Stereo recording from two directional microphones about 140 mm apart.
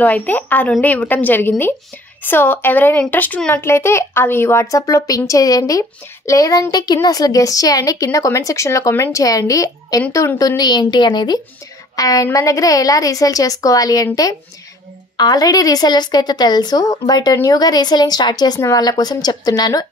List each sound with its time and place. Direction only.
0.0 s a woman's voice: 10° left (ahead or behind); by 19.9 s 25° left (ahead or behind)